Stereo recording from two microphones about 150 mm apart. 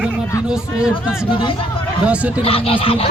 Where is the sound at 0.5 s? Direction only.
5° right (ahead or behind).